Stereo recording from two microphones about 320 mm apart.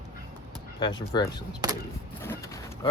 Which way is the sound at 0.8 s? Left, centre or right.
Centre.